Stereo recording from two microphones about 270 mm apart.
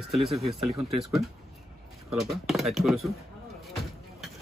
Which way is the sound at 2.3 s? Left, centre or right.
Centre.